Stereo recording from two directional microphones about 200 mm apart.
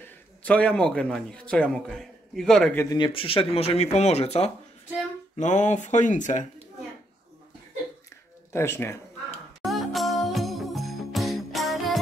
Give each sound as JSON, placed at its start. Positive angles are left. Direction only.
{"t": 0.4, "sound": "a man's voice", "side_deg": 5}
{"t": 8.5, "sound": "a man's voice", "side_deg": 10}
{"t": 9.6, "sound": "jingle bell", "side_deg": 0}